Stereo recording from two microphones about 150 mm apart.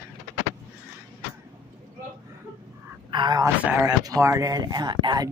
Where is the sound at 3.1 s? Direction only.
30° right (ahead or behind).